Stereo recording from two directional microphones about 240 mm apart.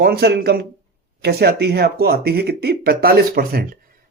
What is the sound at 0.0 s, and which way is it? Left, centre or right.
Speech, right.